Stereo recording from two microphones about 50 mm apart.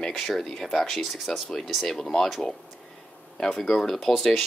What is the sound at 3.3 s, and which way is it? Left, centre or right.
Speech, centre.